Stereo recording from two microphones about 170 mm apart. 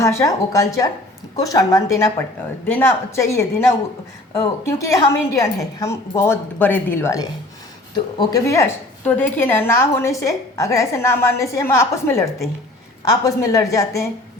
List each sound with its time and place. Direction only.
0.0 s a woman's voice: 15° left (ahead or behind)